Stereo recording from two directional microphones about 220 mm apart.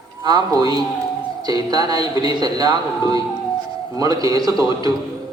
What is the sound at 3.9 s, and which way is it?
Speech, 15° right (ahead or behind).